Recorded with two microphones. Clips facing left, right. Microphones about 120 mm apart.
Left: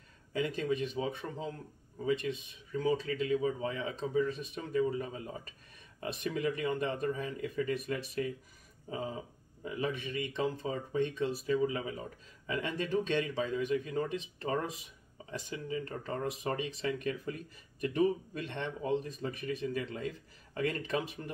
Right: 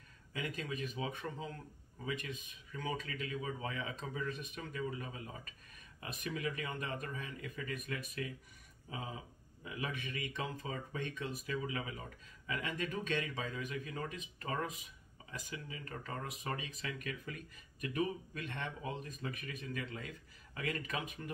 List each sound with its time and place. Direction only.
0.3 s speech: 30° left (ahead or behind)
9.6 s speech: 35° left (ahead or behind)
9.8 s speech: 25° left (ahead or behind)